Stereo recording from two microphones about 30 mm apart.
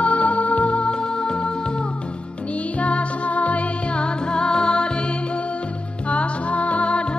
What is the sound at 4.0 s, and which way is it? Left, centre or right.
Music, left.